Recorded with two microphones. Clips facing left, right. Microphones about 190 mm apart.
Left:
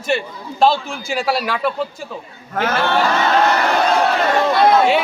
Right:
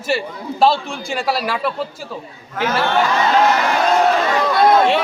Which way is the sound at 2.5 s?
55° left (ahead or behind).